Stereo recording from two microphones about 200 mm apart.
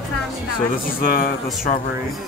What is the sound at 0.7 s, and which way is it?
Speech, 45° left (ahead or behind).